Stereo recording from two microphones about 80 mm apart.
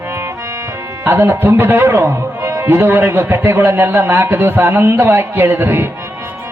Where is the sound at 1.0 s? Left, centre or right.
Right.